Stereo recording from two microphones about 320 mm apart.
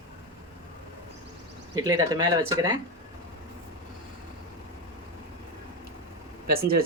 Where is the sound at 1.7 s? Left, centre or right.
Centre.